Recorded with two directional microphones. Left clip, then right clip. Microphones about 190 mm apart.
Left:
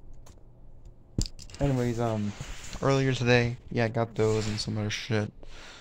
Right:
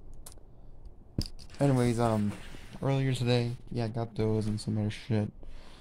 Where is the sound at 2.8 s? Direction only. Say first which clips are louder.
Left 6 dB; 5° left (ahead or behind).